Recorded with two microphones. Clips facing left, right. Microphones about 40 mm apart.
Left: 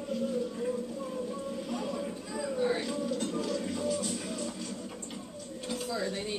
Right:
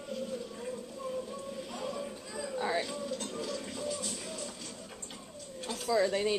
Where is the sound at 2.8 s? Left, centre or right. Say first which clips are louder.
Left 3 dB; centre.